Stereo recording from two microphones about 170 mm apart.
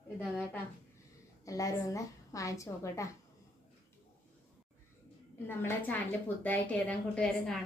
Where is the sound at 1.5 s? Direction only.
20° left (ahead or behind).